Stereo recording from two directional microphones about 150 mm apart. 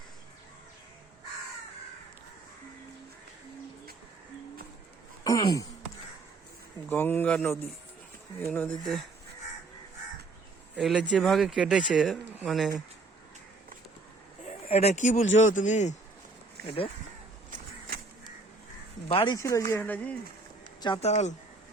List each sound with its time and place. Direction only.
5.2 s a sound: 25° left (ahead or behind)
6.9 s speech: 10° left (ahead or behind)
10.8 s speech: 5° left (ahead or behind)
14.4 s speech: 45° left (ahead or behind)
16.6 s speech: 35° left (ahead or behind)
17.5 s a sound: 90° right
19.0 s speech: 35° left (ahead or behind)
19.4 s speech: 20° left (ahead or behind)
21.0 s speech: 50° left (ahead or behind)